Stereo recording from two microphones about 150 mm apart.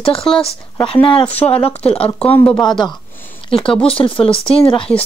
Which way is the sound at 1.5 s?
40° left (ahead or behind).